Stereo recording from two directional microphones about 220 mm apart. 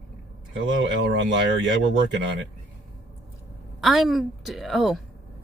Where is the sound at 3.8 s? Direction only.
Centre (ahead or behind).